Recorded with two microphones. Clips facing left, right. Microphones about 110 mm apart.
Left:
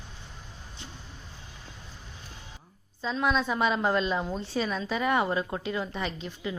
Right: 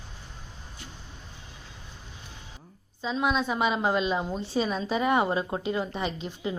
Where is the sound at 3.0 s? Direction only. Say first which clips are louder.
Even; 10° right (ahead or behind).